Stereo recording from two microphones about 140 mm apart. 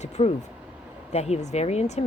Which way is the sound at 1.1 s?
50° left (ahead or behind).